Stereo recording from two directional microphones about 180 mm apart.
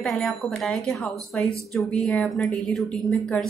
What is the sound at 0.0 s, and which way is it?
A woman's voice, centre (ahead or behind).